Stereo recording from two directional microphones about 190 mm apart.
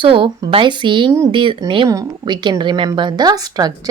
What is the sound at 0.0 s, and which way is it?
A woman's voice, 25° right (ahead or behind).